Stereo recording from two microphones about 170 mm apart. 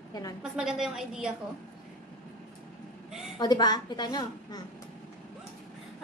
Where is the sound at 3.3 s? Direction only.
25° left (ahead or behind).